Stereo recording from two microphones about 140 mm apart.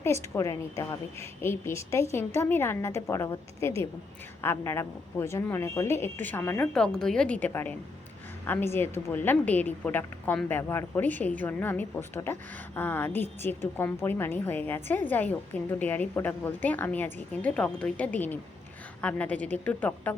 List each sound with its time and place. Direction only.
0.0 s a woman's voice: 20° left (ahead or behind)
6.7 s a woman's voice: 5° left (ahead or behind)